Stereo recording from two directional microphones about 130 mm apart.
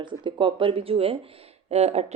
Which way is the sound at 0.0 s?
40° right (ahead or behind).